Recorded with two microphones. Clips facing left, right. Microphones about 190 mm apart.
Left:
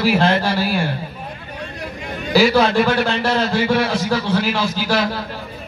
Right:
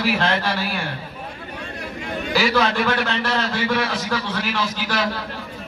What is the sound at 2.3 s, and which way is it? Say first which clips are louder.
A man's voice: left 6 dB; 35° left (ahead or behind).